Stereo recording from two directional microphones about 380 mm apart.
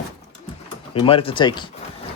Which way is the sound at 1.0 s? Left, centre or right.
Centre.